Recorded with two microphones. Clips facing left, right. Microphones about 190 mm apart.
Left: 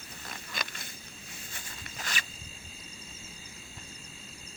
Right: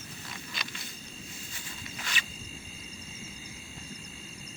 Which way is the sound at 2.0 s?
45° left (ahead or behind).